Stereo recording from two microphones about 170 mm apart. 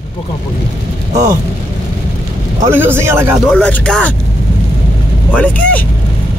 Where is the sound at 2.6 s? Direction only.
10° right (ahead or behind).